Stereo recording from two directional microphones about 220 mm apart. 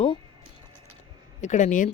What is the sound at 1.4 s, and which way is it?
Speech, 35° left (ahead or behind).